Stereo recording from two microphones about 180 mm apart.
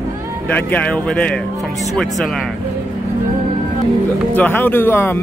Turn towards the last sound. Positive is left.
turn(degrees=10)  # may be behind; listen again after turning